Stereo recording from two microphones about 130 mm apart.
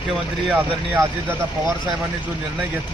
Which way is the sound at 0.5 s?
15° right (ahead or behind).